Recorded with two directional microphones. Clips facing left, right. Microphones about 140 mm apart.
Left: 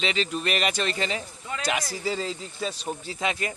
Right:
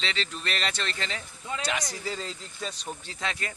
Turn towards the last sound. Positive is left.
turn(degrees=15)  # may be behind; listen again after turning